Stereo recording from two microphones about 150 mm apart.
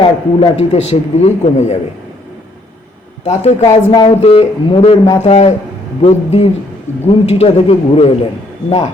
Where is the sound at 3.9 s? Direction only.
35° left (ahead or behind).